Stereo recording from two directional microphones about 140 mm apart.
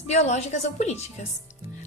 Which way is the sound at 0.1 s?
50° left (ahead or behind).